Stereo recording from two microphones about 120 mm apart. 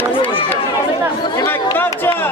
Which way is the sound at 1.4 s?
20° left (ahead or behind).